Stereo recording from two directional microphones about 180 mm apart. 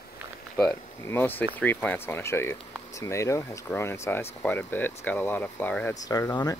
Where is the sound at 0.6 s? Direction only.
10° left (ahead or behind).